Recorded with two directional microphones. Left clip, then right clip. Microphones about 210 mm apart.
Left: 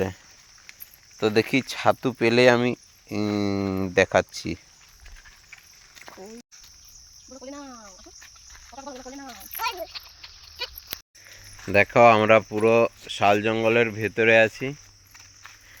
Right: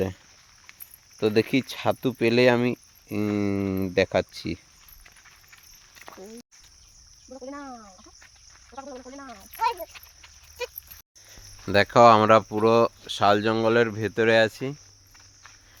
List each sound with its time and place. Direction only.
1.2 s speech: 15° right (ahead or behind)
6.0 s a sound: 35° left (ahead or behind)
7.4 s speech: 5° right (ahead or behind)
8.7 s cricket: 20° left (ahead or behind)
9.2 s speech: 50° left (ahead or behind)
9.6 s speech: 10° right (ahead or behind)
9.9 s a sound: 45° left (ahead or behind)
11.6 s speech: 10° right (ahead or behind)